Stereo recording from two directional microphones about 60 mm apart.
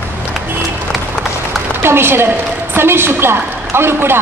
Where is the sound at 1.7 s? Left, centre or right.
Right.